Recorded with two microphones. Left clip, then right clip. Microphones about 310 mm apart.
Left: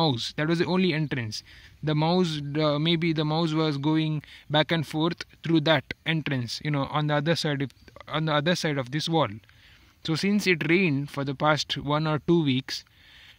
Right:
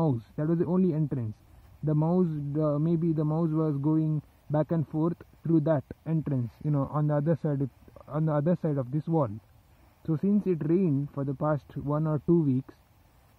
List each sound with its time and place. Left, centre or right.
0.0 s speech: left
10.4 s speech: centre